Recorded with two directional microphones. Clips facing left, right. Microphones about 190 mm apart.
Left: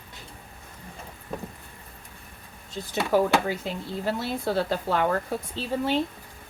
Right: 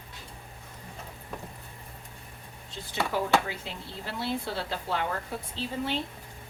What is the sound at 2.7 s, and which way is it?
Speech, 45° left (ahead or behind).